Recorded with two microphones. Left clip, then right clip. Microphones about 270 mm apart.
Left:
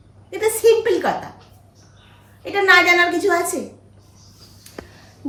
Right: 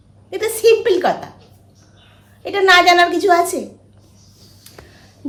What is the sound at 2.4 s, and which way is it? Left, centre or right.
Speech, centre.